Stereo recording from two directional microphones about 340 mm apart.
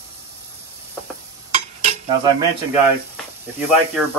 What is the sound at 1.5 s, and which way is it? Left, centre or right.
Cutlery, centre.